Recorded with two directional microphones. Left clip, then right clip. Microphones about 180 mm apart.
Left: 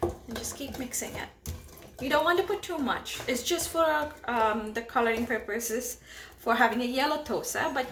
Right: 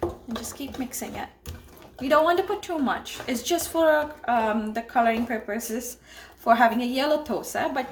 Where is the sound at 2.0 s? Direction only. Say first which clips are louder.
Right 5 dB; 50° right (ahead or behind).